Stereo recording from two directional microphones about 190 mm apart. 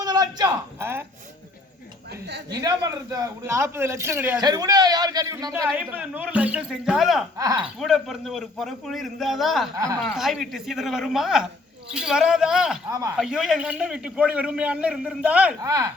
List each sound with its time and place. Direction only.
0.0 s a man's voice: 20° right (ahead or behind)
2.5 s a man's voice: 20° right (ahead or behind)
5.5 s a man's voice: 10° right (ahead or behind)
7.3 s a man's voice: 20° right (ahead or behind)
7.6 s a man's voice: centre (ahead or behind)
9.7 s a man's voice: 20° right (ahead or behind)
10.2 s a man's voice: centre (ahead or behind)
12.9 s a man's voice: 15° right (ahead or behind)
13.1 s a man's voice: centre (ahead or behind)
15.6 s a man's voice: 20° right (ahead or behind)